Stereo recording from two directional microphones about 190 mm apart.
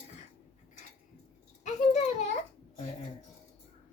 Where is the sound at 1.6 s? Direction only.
40° left (ahead or behind).